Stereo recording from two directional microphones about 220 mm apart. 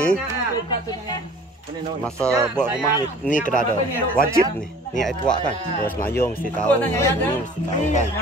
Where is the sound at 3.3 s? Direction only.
35° left (ahead or behind).